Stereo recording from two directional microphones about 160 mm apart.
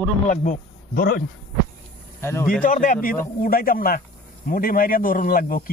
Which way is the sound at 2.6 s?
55° left (ahead or behind).